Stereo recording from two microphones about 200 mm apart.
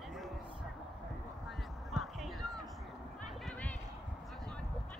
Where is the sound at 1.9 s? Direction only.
Centre (ahead or behind).